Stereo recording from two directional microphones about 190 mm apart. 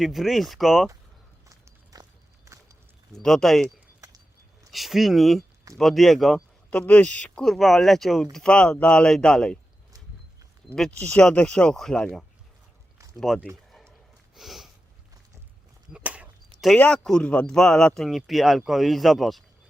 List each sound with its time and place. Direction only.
0.0 s speech: centre (ahead or behind)
1.5 s walk: 20° right (ahead or behind)
3.2 s speech: centre (ahead or behind)
4.7 s speech: centre (ahead or behind)
10.8 s speech: 5° left (ahead or behind)
13.7 s a sound: centre (ahead or behind)
15.9 s a sound: 5° right (ahead or behind)
16.6 s speech: 5° left (ahead or behind)